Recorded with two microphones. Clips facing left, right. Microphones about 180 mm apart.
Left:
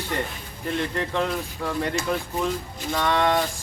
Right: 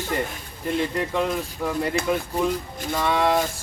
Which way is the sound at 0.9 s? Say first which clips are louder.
Right 2 dB; 5° right (ahead or behind).